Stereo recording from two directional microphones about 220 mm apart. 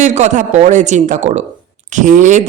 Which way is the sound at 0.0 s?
35° right (ahead or behind).